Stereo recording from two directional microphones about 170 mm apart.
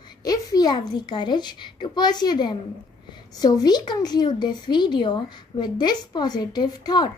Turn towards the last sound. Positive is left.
turn(degrees=25)  # may be behind; listen again after turning